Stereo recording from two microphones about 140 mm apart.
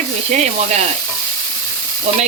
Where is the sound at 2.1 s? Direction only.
50° right (ahead or behind).